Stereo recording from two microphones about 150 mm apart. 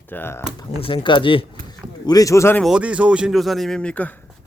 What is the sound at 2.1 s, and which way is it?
Speech, 20° left (ahead or behind).